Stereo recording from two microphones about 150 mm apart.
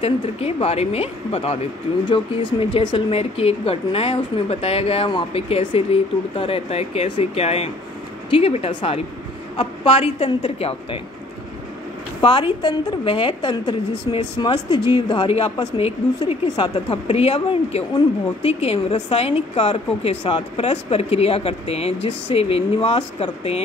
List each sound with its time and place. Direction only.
0.0 s speech: 40° left (ahead or behind)
12.2 s a woman's voice: 30° left (ahead or behind)